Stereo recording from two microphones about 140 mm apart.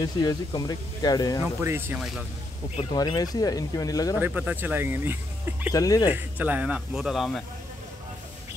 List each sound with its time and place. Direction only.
0.0 s speech: 30° left (ahead or behind)
1.6 s a man's voice: 15° right (ahead or behind)
2.9 s speech: 30° left (ahead or behind)
4.2 s a man's voice: 10° right (ahead or behind)
5.7 s speech: 25° left (ahead or behind)
6.1 s a man's voice: 10° right (ahead or behind)